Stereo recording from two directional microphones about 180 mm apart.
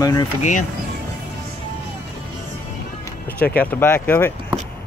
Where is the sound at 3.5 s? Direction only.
10° left (ahead or behind).